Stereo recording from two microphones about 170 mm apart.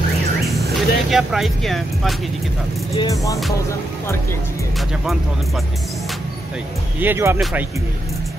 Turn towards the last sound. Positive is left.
turn(degrees=-15)  # may be behind; listen again after turning